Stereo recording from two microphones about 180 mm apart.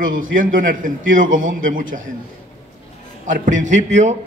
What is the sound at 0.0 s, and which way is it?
A man's voice, 50° right (ahead or behind).